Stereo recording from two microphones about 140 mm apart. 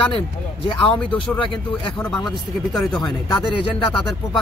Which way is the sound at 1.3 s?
35° left (ahead or behind).